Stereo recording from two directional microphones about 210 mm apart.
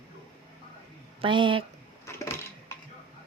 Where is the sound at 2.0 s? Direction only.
15° left (ahead or behind).